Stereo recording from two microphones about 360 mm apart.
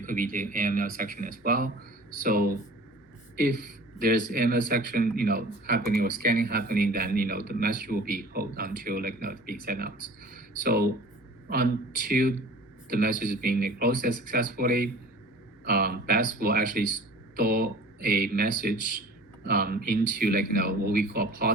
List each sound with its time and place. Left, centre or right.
0.0 s speech: right